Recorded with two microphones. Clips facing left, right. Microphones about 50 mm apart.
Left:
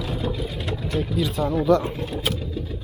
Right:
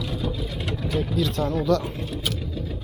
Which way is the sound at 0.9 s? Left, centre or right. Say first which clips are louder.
Even; centre.